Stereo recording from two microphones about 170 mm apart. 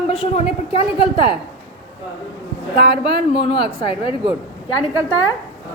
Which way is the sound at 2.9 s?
30° left (ahead or behind).